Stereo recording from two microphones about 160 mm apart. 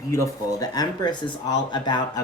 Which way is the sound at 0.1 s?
20° left (ahead or behind).